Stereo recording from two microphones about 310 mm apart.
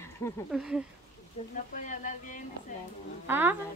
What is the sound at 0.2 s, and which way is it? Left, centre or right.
Speech, centre.